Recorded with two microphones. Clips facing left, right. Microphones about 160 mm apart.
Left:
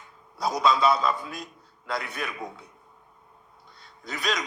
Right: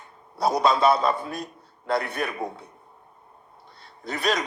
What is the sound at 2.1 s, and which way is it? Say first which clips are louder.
Mantra: right 5 dB; 55° right (ahead or behind).